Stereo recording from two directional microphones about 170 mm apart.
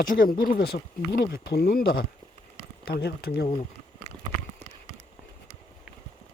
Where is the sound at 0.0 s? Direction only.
55° left (ahead or behind).